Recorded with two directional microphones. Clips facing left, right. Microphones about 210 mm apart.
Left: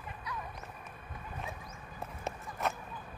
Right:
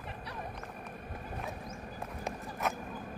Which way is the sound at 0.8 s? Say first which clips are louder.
Right 5 dB; 55° right (ahead or behind).